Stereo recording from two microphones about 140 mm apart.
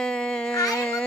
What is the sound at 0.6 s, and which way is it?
Speech, 20° left (ahead or behind).